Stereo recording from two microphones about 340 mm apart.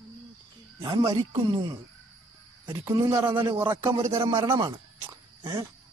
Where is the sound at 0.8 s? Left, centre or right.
Centre.